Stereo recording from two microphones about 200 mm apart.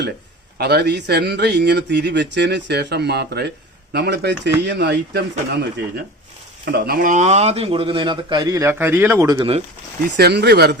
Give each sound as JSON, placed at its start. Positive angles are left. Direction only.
{"t": 0.6, "sound": "speech", "side_deg": -55}
{"t": 6.7, "sound": "speech", "side_deg": -50}
{"t": 10.1, "sound": "speech", "side_deg": -55}